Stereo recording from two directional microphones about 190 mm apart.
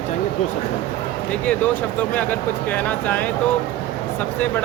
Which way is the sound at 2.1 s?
10° left (ahead or behind).